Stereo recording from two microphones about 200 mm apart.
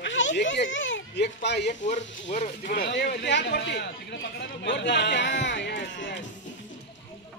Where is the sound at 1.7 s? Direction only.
40° left (ahead or behind); by 6.2 s 60° left (ahead or behind).